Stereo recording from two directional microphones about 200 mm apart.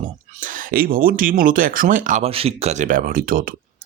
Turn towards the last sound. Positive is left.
turn(degrees=-45)  # may be behind; listen again after turning